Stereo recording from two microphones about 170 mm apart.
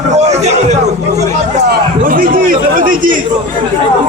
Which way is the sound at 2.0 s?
55° right (ahead or behind).